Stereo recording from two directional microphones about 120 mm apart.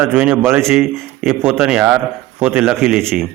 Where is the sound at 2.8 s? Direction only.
Centre (ahead or behind).